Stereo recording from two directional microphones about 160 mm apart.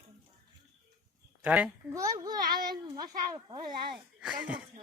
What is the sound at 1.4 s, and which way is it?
Speech, 10° right (ahead or behind).